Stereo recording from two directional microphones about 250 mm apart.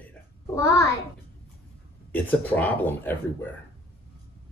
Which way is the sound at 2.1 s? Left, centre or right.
Centre.